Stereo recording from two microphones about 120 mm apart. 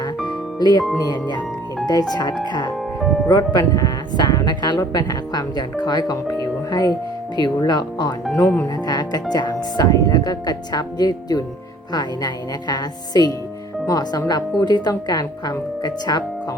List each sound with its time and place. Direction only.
0.6 s speech: 35° left (ahead or behind)
6.4 s music: 30° left (ahead or behind)
7.3 s speech: 35° left (ahead or behind)